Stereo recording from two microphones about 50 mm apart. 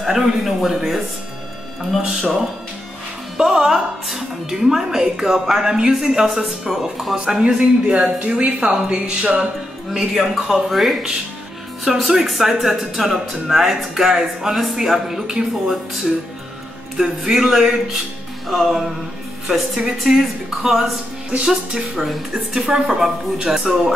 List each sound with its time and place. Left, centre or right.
0.0 s a woman's voice: centre
2.0 s a woman's voice: centre
7.3 s speech: centre
9.9 s a woman's voice: centre
20.1 s a woman's voice: centre